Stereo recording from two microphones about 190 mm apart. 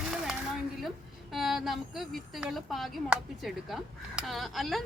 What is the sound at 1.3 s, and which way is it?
A woman's voice, centre (ahead or behind).